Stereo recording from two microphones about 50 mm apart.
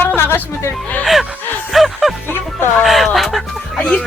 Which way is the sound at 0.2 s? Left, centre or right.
Left.